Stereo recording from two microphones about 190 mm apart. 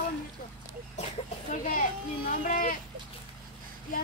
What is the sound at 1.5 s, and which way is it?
A child's voice, 45° left (ahead or behind).